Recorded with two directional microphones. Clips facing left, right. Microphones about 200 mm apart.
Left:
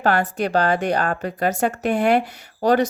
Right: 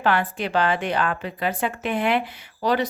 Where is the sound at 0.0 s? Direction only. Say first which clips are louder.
Left 3 dB; 40° left (ahead or behind).